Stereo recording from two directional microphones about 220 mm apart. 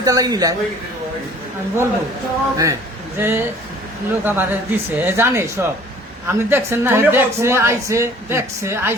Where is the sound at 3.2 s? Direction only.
10° right (ahead or behind).